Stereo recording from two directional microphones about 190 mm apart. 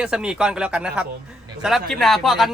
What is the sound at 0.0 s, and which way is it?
Speech, 5° right (ahead or behind).